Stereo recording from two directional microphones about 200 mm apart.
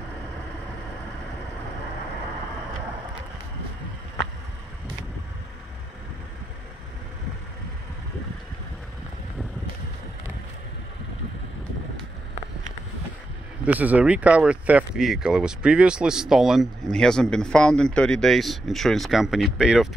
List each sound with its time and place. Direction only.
13.7 s speech: 10° right (ahead or behind)